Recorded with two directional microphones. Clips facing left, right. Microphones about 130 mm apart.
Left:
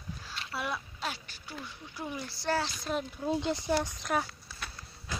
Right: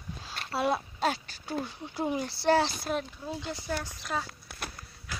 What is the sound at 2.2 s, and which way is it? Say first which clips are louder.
Speech: right 7 dB; 70° right (ahead or behind).